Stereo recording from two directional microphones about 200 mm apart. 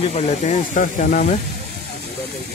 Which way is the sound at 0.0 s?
35° left (ahead or behind).